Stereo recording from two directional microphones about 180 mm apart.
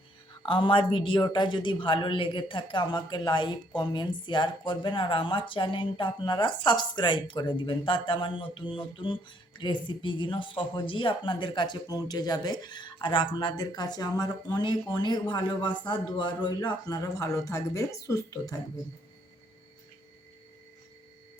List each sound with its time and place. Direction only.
0.4 s speech: 30° left (ahead or behind)